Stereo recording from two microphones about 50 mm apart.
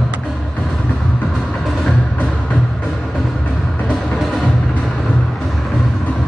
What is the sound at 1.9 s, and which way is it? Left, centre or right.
Music, left.